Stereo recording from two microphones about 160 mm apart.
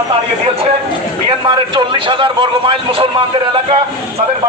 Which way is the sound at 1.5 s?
30° right (ahead or behind).